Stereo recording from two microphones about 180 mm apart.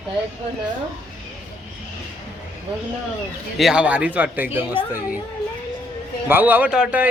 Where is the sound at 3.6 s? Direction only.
5° right (ahead or behind).